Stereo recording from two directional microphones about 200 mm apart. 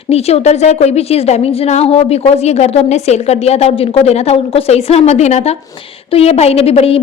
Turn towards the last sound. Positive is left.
turn(degrees=30)  # may be behind; listen again after turning